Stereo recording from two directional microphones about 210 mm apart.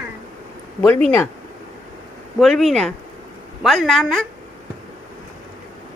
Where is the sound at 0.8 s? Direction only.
10° left (ahead or behind).